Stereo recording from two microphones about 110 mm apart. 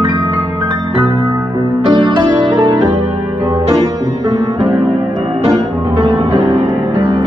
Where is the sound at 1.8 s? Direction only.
50° right (ahead or behind).